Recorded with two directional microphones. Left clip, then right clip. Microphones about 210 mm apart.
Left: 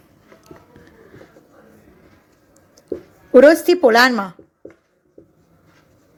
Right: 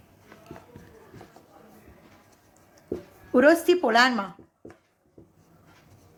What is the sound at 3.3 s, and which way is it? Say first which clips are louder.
A woman's voice: left 9 dB; 30° left (ahead or behind).